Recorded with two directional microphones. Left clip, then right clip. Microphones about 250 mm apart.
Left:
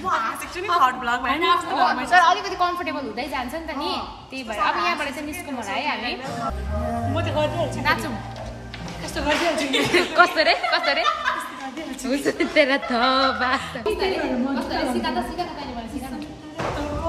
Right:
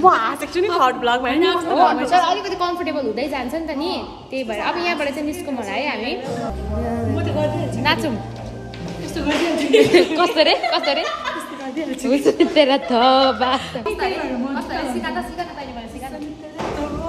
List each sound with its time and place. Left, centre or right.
0.1 s a woman's voice: centre
7.2 s a woman's voice: centre
9.1 s a woman's voice: centre